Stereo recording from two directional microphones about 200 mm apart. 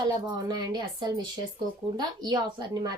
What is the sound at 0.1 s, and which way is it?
Speech, 20° right (ahead or behind).